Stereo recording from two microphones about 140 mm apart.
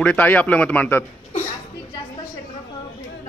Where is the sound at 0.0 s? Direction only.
10° left (ahead or behind).